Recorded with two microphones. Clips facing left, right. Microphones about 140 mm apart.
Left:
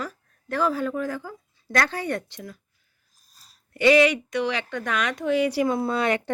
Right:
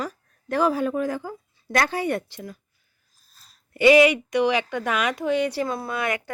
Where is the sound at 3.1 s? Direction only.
40° left (ahead or behind).